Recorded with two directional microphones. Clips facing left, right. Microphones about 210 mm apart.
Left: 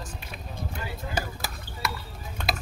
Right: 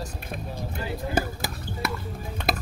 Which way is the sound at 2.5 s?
50° right (ahead or behind).